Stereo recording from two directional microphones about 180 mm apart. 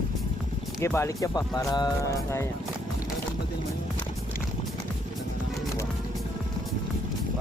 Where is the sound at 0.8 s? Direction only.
15° left (ahead or behind).